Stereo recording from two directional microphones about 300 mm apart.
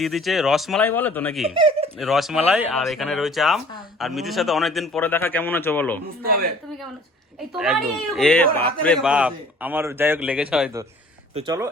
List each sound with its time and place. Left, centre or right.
0.0 s a man's voice: centre
1.5 s speech: centre
2.0 s a man's voice: centre
7.5 s a man's voice: centre